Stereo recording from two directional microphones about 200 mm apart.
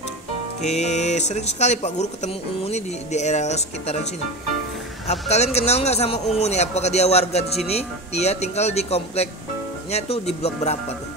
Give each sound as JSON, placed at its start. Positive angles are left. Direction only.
{"t": 0.6, "sound": "a man's voice", "side_deg": 35}